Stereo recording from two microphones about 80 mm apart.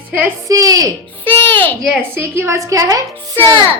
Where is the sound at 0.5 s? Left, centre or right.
Right.